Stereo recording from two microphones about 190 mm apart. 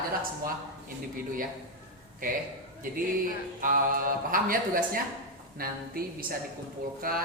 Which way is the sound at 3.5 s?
45° right (ahead or behind).